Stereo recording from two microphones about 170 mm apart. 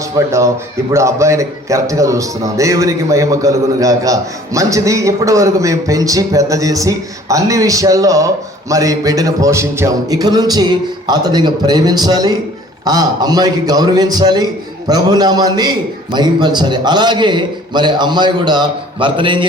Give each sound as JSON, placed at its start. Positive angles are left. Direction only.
{"t": 0.3, "sound": "a man's voice", "side_deg": -15}